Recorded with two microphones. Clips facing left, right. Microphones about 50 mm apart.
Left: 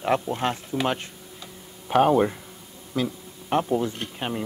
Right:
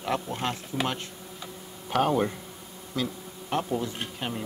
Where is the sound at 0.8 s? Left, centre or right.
Centre.